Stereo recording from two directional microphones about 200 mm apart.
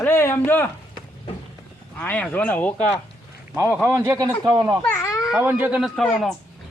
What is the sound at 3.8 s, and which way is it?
A man's voice, 15° right (ahead or behind).